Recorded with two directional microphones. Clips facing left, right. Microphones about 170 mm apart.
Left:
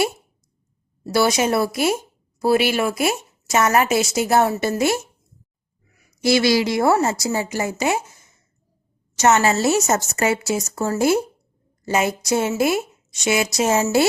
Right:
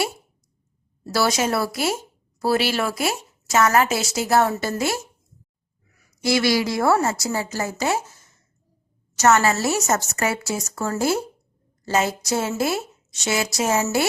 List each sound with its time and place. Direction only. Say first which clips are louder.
1.0 s speech: left 3 dB; 15° left (ahead or behind)
6.2 s speech: left 3 dB; 25° left (ahead or behind)